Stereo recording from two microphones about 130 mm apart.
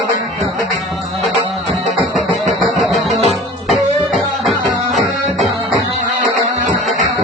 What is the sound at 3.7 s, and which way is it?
Music, centre (ahead or behind).